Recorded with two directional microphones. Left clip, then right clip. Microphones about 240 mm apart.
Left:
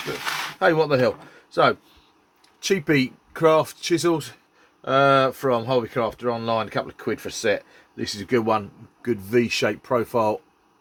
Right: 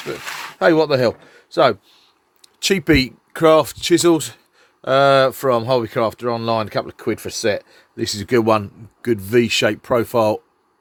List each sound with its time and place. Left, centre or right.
0.6 s speech: right